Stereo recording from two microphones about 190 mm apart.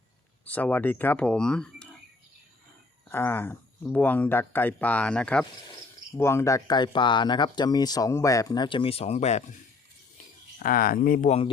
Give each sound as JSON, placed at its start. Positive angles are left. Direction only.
{"t": 0.4, "sound": "speech", "side_deg": 10}
{"t": 3.1, "sound": "speech", "side_deg": 10}
{"t": 10.6, "sound": "speech", "side_deg": 50}
{"t": 11.3, "sound": "a man's voice", "side_deg": 30}